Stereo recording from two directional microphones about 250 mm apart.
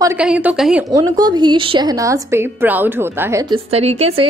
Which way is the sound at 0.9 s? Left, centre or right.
Centre.